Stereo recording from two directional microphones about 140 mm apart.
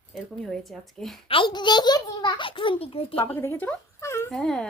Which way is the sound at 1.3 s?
35° left (ahead or behind).